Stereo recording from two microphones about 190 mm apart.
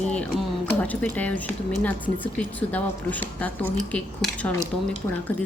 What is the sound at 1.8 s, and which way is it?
Speech, 10° left (ahead or behind).